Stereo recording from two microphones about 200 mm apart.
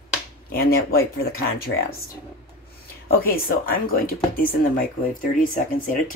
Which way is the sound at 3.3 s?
45° left (ahead or behind).